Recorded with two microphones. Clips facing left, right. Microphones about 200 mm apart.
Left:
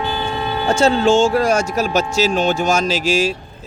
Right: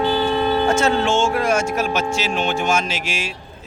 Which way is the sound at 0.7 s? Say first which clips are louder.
Left 4 dB; 30° left (ahead or behind).